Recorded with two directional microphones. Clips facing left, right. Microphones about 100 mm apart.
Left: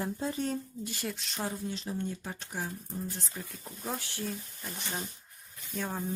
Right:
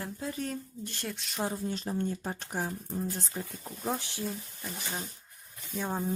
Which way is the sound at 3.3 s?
30° right (ahead or behind).